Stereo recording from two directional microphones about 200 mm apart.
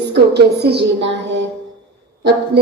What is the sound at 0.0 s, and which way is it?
A woman's voice, 55° right (ahead or behind).